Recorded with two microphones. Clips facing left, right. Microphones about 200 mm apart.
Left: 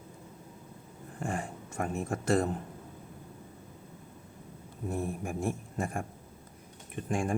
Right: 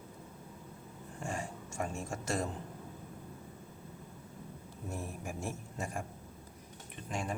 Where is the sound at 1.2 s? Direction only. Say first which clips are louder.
Left 4 dB; 55° left (ahead or behind).